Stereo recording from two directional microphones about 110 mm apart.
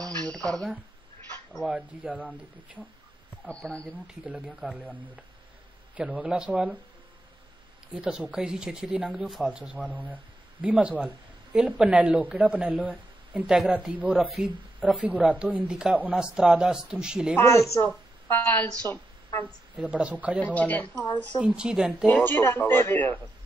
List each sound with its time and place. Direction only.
0.0 s a sound: 10° left (ahead or behind)
1.5 s speech: 5° right (ahead or behind)
3.4 s speech: 10° left (ahead or behind)
4.1 s speech: 10° right (ahead or behind)
5.9 s speech: 10° right (ahead or behind)
7.9 s speech: 5° right (ahead or behind)
17.4 s a man's voice: 25° left (ahead or behind)
19.4 s speech: 10° right (ahead or behind)
20.3 s speech: 15° left (ahead or behind)
21.4 s speech: 5° right (ahead or behind)
22.2 s a man's voice: 20° left (ahead or behind)